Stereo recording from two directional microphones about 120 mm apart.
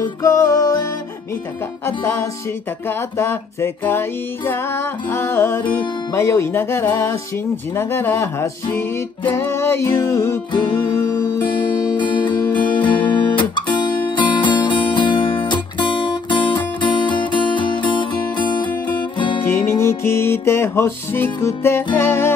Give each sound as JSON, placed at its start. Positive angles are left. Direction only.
{"t": 0.0, "sound": "music", "side_deg": 25}
{"t": 1.9, "sound": "music", "side_deg": 20}
{"t": 12.0, "sound": "guitar", "side_deg": 40}
{"t": 19.6, "sound": "music", "side_deg": 20}